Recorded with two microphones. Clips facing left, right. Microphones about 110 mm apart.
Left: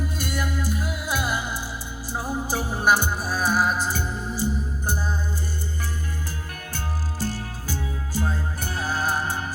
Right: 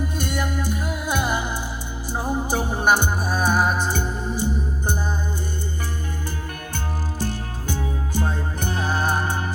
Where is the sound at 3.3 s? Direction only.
20° right (ahead or behind).